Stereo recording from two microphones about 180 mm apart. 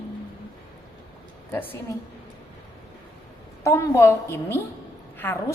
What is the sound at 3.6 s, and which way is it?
A woman's voice, 15° left (ahead or behind).